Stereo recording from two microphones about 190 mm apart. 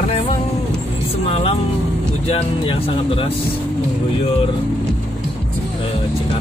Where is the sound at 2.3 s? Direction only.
30° left (ahead or behind).